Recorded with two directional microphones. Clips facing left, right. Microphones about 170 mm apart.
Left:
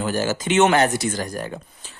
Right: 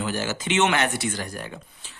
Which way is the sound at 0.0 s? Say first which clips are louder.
Left 5 dB; 40° left (ahead or behind).